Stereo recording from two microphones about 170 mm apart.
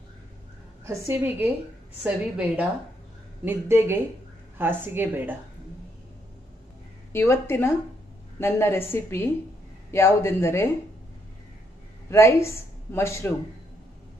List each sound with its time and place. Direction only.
0.8 s a woman's voice: 15° right (ahead or behind)
7.1 s a woman's voice: 15° left (ahead or behind)
12.1 s speech: 15° left (ahead or behind)